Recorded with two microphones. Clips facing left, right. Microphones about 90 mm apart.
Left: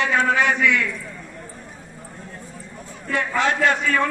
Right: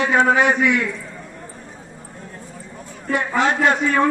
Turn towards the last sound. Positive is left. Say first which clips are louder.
# right 2 dB
turn(degrees=-25)  # may be behind; listen again after turning